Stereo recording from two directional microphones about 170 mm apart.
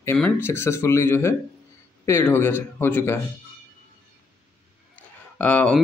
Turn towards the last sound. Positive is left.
turn(degrees=10)  # may be behind; listen again after turning